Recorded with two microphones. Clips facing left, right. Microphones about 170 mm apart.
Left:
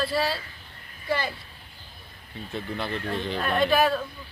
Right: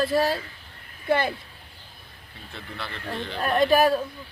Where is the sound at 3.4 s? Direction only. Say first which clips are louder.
Right 3 dB; 40° right (ahead or behind).